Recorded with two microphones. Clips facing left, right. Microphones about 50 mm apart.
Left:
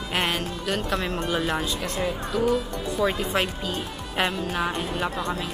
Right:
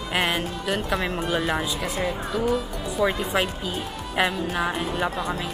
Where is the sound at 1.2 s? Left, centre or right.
Centre.